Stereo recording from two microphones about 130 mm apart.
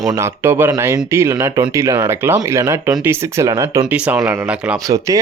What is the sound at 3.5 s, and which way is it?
Speech, 30° right (ahead or behind).